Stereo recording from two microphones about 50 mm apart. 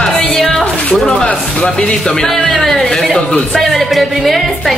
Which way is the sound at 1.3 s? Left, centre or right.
Centre.